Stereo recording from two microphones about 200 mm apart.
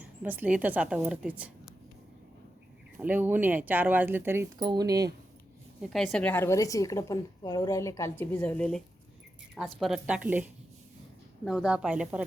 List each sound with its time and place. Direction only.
0.2 s speech: 10° right (ahead or behind)
3.0 s speech: 10° right (ahead or behind)
5.9 s a woman's voice: centre (ahead or behind)